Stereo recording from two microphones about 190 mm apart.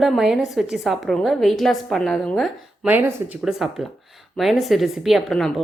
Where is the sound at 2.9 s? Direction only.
10° right (ahead or behind).